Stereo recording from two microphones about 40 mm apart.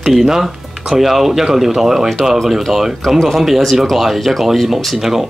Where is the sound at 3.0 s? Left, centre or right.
Centre.